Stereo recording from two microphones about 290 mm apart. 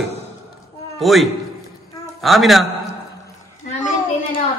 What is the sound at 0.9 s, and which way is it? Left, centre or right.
A man's voice, centre.